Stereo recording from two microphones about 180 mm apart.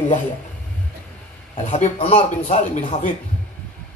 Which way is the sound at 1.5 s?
40° left (ahead or behind).